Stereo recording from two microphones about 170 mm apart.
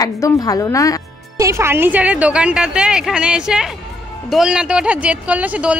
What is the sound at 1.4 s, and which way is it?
Speech, 15° right (ahead or behind).